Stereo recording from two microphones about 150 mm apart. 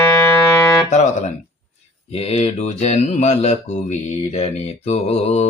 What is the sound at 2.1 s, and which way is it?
Speech, 45° left (ahead or behind).